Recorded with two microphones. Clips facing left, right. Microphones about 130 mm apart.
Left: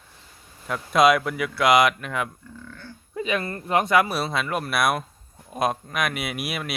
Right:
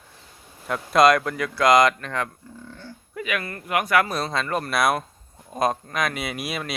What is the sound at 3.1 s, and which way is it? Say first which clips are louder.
Speech: left 3 dB; 25° left (ahead or behind).